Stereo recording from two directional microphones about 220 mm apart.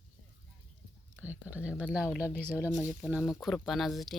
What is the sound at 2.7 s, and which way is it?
Speech, 15° left (ahead or behind).